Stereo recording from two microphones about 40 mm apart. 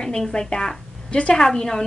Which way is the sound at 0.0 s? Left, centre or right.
Centre.